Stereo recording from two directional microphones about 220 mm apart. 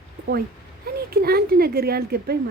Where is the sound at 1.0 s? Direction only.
45° right (ahead or behind).